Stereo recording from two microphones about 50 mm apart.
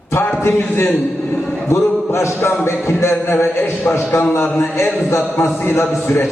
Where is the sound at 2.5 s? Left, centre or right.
Left.